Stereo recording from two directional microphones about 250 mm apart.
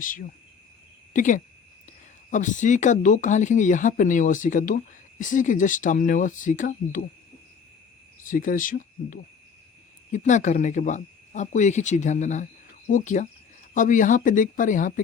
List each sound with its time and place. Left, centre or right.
0.0 s speech: left
8.2 s speech: left